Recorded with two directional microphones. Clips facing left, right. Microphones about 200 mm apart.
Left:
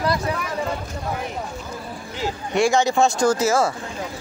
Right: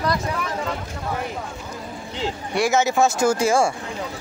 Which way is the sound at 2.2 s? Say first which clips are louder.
Left 2 dB; 25° right (ahead or behind).